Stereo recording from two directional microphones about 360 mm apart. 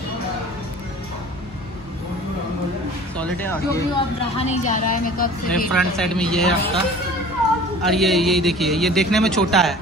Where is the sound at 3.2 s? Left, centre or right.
Centre.